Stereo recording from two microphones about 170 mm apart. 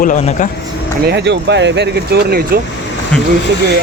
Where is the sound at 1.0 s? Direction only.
90° right.